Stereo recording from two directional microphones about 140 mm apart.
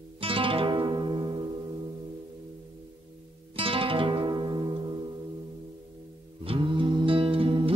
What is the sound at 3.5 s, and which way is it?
Music, 40° right (ahead or behind).